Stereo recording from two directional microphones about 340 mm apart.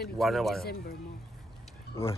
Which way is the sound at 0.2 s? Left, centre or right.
Centre.